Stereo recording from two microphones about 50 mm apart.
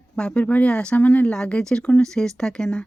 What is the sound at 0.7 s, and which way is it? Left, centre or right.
Speech, centre.